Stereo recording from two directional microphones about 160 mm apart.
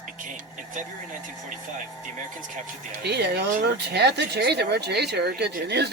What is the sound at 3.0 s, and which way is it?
Speech, 90° right.